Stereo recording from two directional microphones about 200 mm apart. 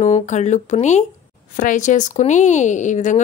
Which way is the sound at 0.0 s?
35° left (ahead or behind).